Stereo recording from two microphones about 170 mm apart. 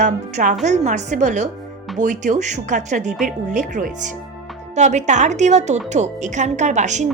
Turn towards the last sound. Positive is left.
turn(degrees=-45)  # may be behind; listen again after turning